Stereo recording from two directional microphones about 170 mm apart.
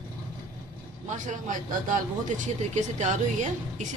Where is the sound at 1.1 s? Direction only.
50° right (ahead or behind).